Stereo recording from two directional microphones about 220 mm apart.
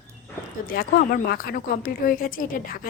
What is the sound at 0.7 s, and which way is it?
A woman's voice, 45° left (ahead or behind).